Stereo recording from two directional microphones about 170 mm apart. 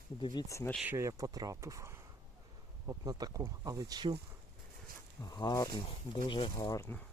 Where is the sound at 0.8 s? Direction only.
10° right (ahead or behind).